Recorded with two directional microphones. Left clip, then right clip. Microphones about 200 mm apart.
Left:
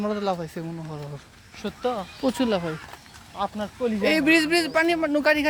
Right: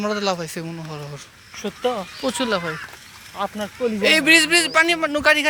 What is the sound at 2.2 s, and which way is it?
Speech, 15° left (ahead or behind).